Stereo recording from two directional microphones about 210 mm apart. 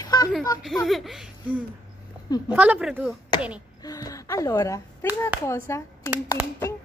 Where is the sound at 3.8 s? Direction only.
15° left (ahead or behind).